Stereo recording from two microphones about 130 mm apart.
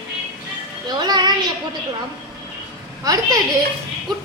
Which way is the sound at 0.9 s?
35° right (ahead or behind).